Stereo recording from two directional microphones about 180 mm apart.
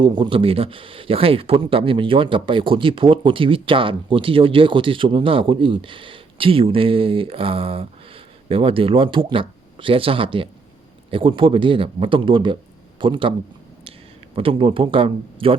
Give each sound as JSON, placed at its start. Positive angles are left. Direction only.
{"t": 0.0, "sound": "speech", "side_deg": -30}
{"t": 14.3, "sound": "speech", "side_deg": -30}